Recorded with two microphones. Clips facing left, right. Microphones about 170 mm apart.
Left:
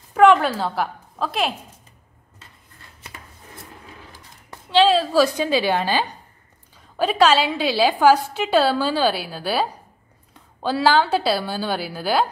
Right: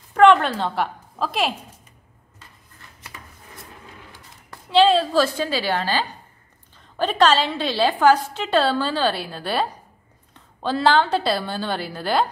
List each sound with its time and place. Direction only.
0.1 s a woman's voice: 5° left (ahead or behind)
4.6 s a woman's voice: centre (ahead or behind)
5.2 s a woman's voice: 15° left (ahead or behind)